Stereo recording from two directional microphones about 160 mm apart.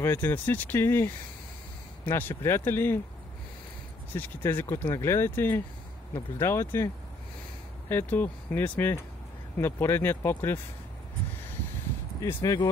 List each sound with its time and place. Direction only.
0.0 s speech: 15° left (ahead or behind)
4.1 s speech: 15° left (ahead or behind)
7.9 s speech: 15° left (ahead or behind)
12.2 s speech: 20° left (ahead or behind)